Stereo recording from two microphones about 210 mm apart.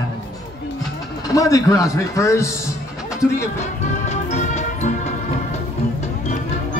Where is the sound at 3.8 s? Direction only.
35° left (ahead or behind).